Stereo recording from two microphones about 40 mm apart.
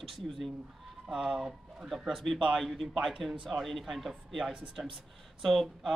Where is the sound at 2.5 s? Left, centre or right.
Centre.